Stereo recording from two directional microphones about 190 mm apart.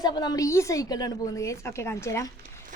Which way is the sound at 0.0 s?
20° left (ahead or behind).